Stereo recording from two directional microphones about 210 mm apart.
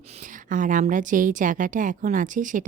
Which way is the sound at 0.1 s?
40° right (ahead or behind).